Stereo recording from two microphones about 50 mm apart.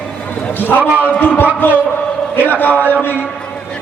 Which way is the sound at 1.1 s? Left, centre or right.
Left.